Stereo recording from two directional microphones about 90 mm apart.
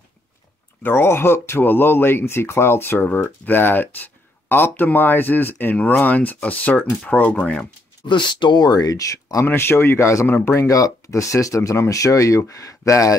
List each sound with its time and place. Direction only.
0.8 s speech: 25° left (ahead or behind)
8.1 s speech: 60° left (ahead or behind); by 9.5 s 40° left (ahead or behind)
9.5 s speech: 25° left (ahead or behind)
10.7 s speech: 40° left (ahead or behind)